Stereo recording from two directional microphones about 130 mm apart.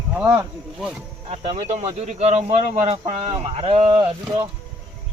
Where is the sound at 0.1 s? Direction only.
10° right (ahead or behind).